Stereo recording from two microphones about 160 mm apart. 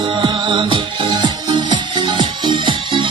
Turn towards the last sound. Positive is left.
turn(degrees=-30)  # may be behind; listen again after turning